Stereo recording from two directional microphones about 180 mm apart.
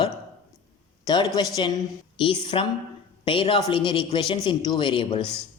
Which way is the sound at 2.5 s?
30° left (ahead or behind).